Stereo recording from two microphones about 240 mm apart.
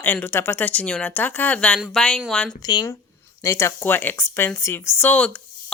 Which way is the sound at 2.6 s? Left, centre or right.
Centre.